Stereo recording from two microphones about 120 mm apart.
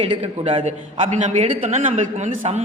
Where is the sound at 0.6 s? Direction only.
70° right (ahead or behind).